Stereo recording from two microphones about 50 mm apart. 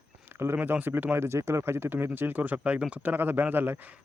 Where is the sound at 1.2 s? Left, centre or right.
Right.